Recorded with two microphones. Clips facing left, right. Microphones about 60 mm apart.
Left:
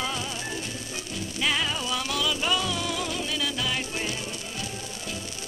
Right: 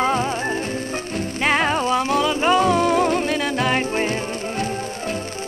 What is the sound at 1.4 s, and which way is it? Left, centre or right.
Music, right.